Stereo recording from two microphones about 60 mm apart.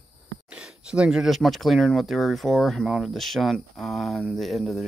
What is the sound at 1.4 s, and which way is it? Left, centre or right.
Speech, centre.